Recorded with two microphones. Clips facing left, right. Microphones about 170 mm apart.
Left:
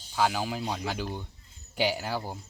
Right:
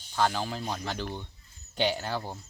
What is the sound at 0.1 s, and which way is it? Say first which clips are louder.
Speech: left 1 dB; 5° left (ahead or behind).